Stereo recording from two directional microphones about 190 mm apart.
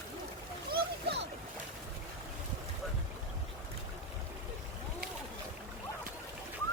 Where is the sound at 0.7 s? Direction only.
60° right (ahead or behind).